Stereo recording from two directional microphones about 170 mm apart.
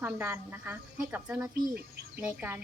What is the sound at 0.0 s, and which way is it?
Speech, 15° right (ahead or behind).